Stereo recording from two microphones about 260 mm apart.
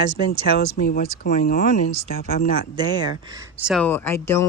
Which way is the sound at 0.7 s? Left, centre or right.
Left.